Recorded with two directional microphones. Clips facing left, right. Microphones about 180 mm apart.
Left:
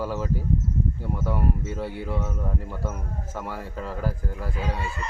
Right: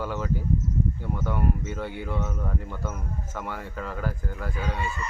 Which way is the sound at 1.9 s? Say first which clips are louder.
Left 1 dB; 35° left (ahead or behind).